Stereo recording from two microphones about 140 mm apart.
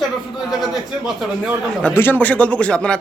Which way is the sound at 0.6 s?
Centre (ahead or behind).